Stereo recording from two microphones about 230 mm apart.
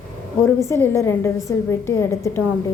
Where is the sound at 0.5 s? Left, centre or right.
Centre.